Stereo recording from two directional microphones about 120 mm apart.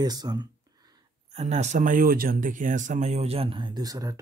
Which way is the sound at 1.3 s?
65° right (ahead or behind).